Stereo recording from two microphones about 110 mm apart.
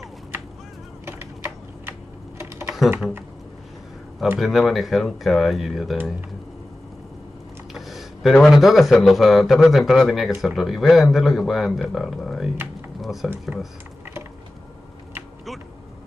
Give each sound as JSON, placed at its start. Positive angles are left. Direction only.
{"t": 1.0, "sound": "typing", "side_deg": -20}
{"t": 4.4, "sound": "speech", "side_deg": 0}
{"t": 7.7, "sound": "speech", "side_deg": 0}